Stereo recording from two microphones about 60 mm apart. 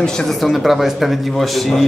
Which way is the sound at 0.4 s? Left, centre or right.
Centre.